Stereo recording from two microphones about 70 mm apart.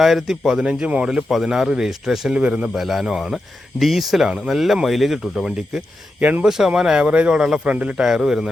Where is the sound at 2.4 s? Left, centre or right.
Centre.